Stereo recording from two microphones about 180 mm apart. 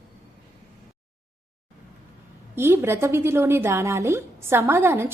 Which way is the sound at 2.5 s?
15° right (ahead or behind).